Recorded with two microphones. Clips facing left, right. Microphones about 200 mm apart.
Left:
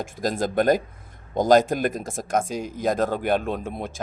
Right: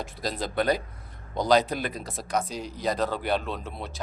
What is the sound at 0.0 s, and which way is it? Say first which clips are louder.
Speech: left 6 dB; 50° left (ahead or behind).